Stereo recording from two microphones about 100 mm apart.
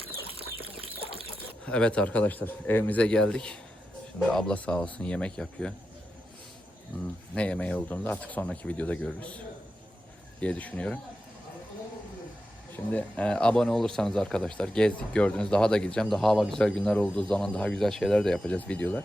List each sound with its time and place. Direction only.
0.3 s chicken: 70° right (ahead or behind)
1.6 s speech: 10° left (ahead or behind)
7.3 s speech: 10° left (ahead or behind)
10.4 s speech: 15° left (ahead or behind)
12.7 s speech: 15° left (ahead or behind)